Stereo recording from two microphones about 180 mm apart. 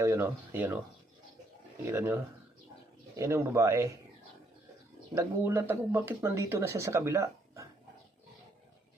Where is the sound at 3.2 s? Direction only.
15° right (ahead or behind).